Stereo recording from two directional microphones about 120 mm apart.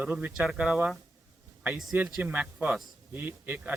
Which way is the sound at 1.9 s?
15° right (ahead or behind).